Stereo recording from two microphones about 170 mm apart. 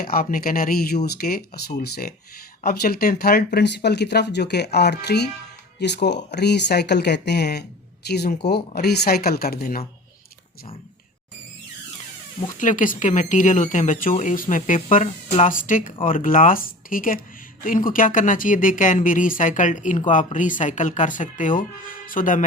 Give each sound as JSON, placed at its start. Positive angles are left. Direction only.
{"t": 0.0, "sound": "speech", "side_deg": 60}
{"t": 12.5, "sound": "speech", "side_deg": 50}